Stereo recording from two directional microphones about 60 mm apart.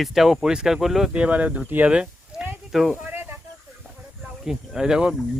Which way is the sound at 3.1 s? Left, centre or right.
Right.